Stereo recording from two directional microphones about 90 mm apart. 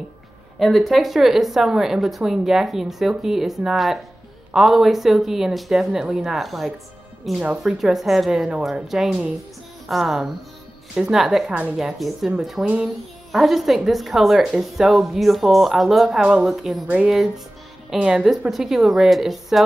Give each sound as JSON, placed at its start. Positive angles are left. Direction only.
{"t": 0.6, "sound": "a woman's voice", "side_deg": 0}
{"t": 13.3, "sound": "speech", "side_deg": 0}
{"t": 16.8, "sound": "a woman's voice", "side_deg": -15}